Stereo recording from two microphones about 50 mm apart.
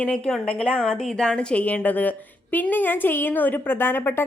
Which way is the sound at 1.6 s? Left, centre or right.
Left.